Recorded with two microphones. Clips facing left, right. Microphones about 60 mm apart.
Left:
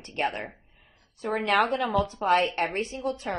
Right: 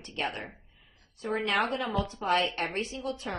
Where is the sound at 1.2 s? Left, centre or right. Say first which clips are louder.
Left 2 dB; left.